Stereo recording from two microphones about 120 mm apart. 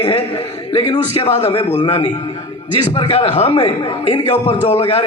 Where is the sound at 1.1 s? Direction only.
50° left (ahead or behind).